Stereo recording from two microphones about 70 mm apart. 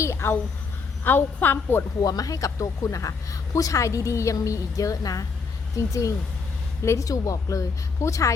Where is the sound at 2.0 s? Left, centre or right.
Left.